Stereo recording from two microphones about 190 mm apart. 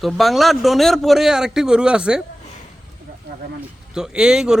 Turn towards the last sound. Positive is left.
turn(degrees=-5)  # may be behind; listen again after turning